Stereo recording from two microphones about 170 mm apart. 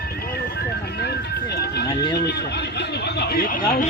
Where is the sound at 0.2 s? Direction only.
65° left (ahead or behind).